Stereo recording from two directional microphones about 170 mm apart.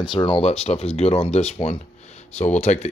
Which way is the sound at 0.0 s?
30° left (ahead or behind).